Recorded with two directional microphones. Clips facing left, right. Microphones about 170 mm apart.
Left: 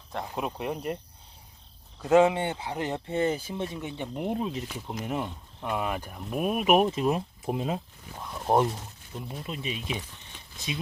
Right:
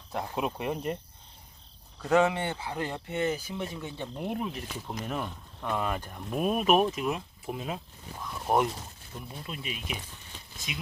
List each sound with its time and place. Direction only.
0.1 s speech: centre (ahead or behind)
2.0 s speech: 20° left (ahead or behind)
6.9 s speech: 35° left (ahead or behind)